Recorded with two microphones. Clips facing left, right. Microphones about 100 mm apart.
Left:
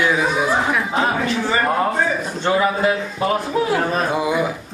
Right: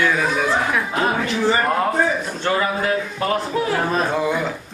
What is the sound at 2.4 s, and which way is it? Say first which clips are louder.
A man's voice: left 5 dB; 15° left (ahead or behind).